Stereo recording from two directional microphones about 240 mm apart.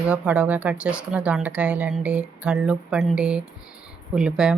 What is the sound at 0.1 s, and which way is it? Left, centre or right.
Speech, centre.